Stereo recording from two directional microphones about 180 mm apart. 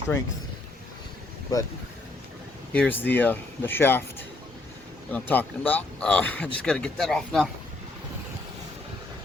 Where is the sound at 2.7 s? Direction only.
10° left (ahead or behind).